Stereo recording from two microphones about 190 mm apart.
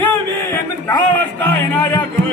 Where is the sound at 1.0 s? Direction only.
10° left (ahead or behind).